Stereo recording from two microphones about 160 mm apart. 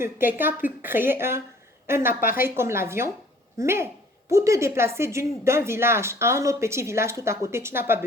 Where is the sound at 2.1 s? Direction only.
60° left (ahead or behind).